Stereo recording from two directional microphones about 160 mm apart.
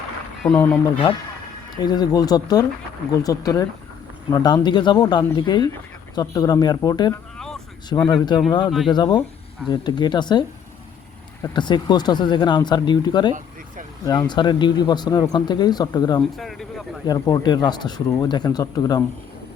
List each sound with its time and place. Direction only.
0.4 s speech: 5° left (ahead or behind)
1.7 s speech: 25° left (ahead or behind)
7.3 s vehicle: 5° left (ahead or behind)
7.9 s speech: 30° left (ahead or behind)
11.5 s speech: 30° left (ahead or behind)
16.3 s speech: centre (ahead or behind)
17.1 s speech: 25° left (ahead or behind)